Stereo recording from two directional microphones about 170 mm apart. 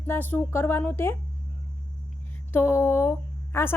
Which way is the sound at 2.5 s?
15° left (ahead or behind).